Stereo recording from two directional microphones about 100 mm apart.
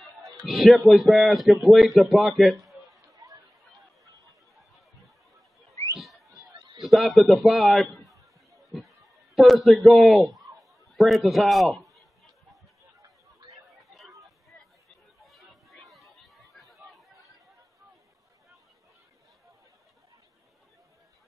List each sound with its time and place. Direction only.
0.5 s speech: centre (ahead or behind)
3.1 s chatter: 35° right (ahead or behind)
5.9 s a sound: centre (ahead or behind)
6.6 s a sound: 55° right (ahead or behind)
6.9 s a man's voice: centre (ahead or behind)
15.2 s chatter: centre (ahead or behind)